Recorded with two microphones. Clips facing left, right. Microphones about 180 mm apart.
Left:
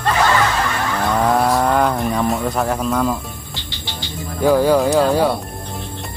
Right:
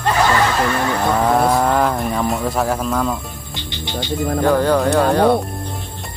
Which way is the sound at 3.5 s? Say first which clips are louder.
Right 5 dB; 20° right (ahead or behind).